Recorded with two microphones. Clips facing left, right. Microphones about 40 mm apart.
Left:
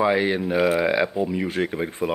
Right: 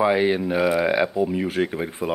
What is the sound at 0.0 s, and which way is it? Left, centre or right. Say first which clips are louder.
Speech: right 1 dB; centre.